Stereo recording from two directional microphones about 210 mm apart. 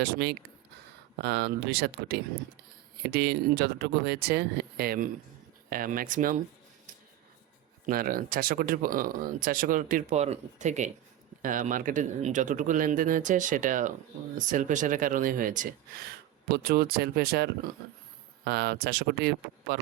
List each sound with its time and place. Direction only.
0.0 s speech: 50° right (ahead or behind)
7.9 s speech: 45° right (ahead or behind)